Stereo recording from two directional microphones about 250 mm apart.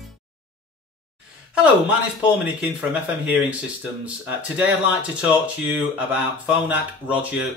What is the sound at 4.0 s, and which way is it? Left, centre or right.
Speech, centre.